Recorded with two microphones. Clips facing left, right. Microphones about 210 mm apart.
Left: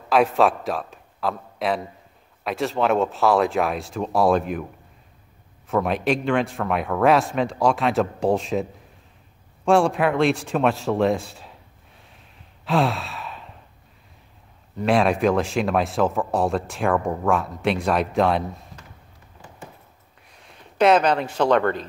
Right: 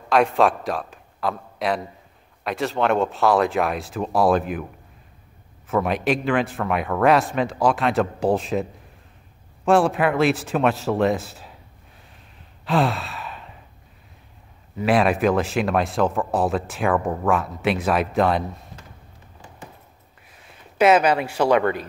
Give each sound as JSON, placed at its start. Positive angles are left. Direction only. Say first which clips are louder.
{"t": 0.1, "sound": "a man's voice", "louder": "even", "side_deg": 0}
{"t": 5.7, "sound": "speech", "louder": "even", "side_deg": 0}
{"t": 9.7, "sound": "speech", "louder": "even", "side_deg": 0}
{"t": 12.6, "sound": "sigh", "louder": "even", "side_deg": 0}
{"t": 14.8, "sound": "speech", "louder": "even", "side_deg": -5}
{"t": 20.2, "sound": "speech", "louder": "left 1 dB", "side_deg": -5}